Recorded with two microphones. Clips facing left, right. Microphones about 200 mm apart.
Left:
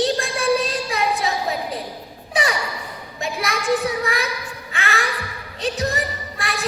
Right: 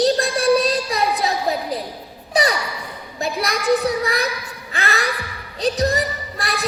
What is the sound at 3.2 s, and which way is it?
A child's voice, 35° right (ahead or behind).